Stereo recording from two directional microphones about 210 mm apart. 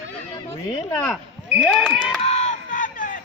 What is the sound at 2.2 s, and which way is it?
Crowd, 30° left (ahead or behind).